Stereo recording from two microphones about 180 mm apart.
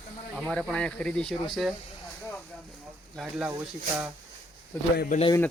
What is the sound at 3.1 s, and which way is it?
Speech, centre (ahead or behind).